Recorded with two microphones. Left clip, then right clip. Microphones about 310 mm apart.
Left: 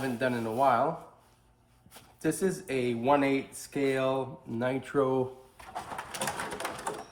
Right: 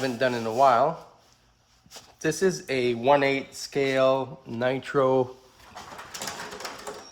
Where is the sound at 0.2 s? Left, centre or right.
Right.